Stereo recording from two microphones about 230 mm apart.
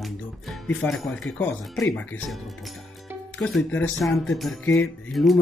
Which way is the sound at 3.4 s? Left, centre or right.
Centre.